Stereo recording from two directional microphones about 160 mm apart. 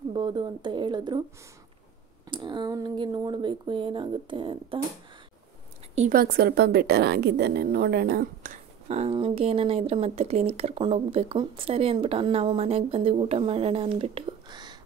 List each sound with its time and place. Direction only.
0.1 s speech: 30° right (ahead or behind)
2.2 s speech: 30° right (ahead or behind)
5.9 s a woman's voice: 60° right (ahead or behind)
8.8 s speech: 45° right (ahead or behind); by 14.8 s 25° right (ahead or behind)